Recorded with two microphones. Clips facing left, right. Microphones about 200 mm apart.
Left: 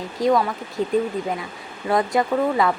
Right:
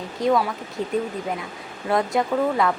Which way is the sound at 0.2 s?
Centre (ahead or behind).